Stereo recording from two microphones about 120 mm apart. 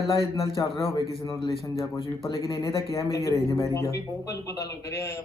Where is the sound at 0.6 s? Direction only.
35° left (ahead or behind).